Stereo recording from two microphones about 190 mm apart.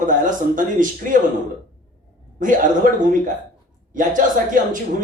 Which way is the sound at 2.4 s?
45° right (ahead or behind).